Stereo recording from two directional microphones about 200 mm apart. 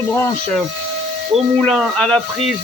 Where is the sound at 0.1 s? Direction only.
5° left (ahead or behind).